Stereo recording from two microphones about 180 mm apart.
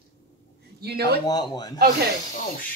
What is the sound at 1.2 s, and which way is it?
Speech, 20° left (ahead or behind).